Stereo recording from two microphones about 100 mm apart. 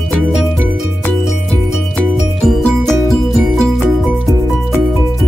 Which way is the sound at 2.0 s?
5° left (ahead or behind).